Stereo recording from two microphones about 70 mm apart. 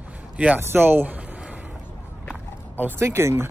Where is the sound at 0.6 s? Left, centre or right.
Right.